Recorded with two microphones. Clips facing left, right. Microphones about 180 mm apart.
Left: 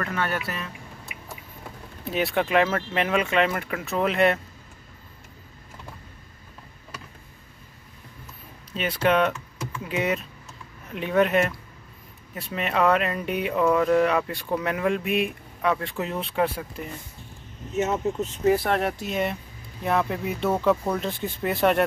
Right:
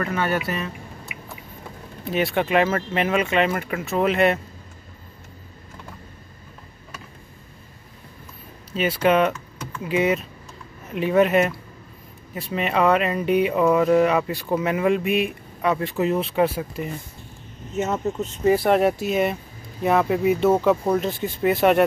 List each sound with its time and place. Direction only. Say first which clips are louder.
0.0 s speech: right 4 dB; 5° right (ahead or behind)
2.0 s speech: right 2 dB; centre (ahead or behind)
8.7 s speech: right 3 dB; 5° right (ahead or behind)
17.7 s speech: even; 5° left (ahead or behind)